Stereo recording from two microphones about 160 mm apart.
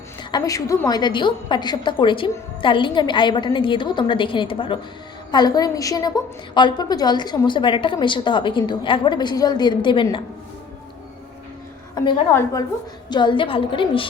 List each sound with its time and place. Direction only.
0.2 s a woman's voice: 25° left (ahead or behind)
11.9 s a woman's voice: 30° left (ahead or behind)